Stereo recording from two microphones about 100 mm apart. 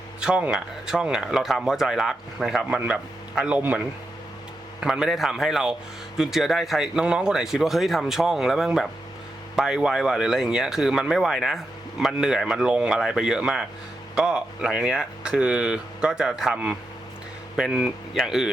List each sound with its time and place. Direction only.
0.2 s speech: 10° right (ahead or behind)
2.6 s speech: 10° right (ahead or behind)
4.8 s speech: 5° right (ahead or behind)